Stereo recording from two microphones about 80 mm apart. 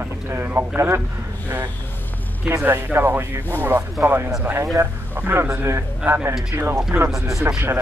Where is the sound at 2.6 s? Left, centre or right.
Right.